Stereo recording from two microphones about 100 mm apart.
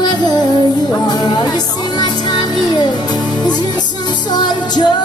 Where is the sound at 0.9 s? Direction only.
45° left (ahead or behind).